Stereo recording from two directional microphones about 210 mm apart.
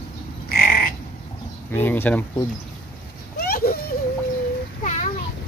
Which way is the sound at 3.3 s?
45° left (ahead or behind).